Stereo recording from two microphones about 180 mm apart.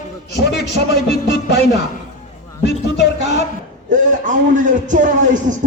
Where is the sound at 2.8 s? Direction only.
90° left.